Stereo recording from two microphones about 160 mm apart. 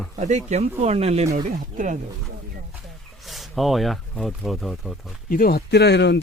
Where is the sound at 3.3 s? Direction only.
Centre (ahead or behind).